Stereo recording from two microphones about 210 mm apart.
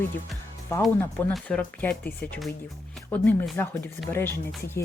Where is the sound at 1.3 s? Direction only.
5° left (ahead or behind).